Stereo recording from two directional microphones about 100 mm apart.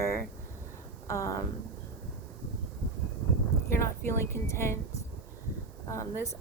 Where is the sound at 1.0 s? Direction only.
30° left (ahead or behind).